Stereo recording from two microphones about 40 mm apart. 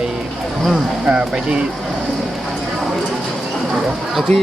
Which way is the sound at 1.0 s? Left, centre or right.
Right.